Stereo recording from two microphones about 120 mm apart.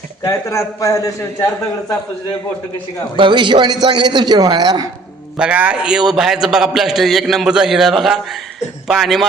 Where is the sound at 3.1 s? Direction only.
45° right (ahead or behind).